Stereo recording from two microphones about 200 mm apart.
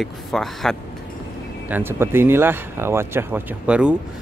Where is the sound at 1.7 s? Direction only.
10° right (ahead or behind).